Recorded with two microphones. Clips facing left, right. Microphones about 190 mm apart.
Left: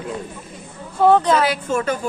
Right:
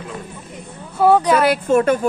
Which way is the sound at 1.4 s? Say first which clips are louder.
Right 6 dB; 55° right (ahead or behind).